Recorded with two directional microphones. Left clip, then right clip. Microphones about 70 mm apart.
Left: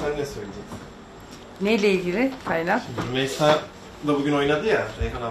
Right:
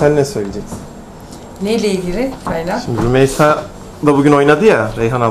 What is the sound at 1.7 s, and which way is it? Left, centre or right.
Speech, centre.